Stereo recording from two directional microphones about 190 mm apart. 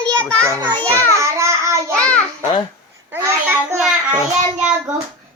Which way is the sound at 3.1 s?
10° right (ahead or behind).